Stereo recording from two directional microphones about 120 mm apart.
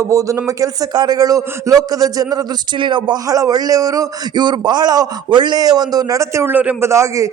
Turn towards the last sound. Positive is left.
turn(degrees=-25)  # may be behind; listen again after turning